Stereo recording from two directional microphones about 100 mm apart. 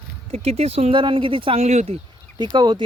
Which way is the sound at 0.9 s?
55° right (ahead or behind).